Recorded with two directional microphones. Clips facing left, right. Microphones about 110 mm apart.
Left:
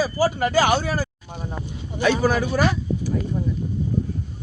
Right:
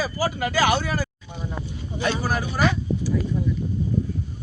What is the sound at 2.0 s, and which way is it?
Speech, 90° left.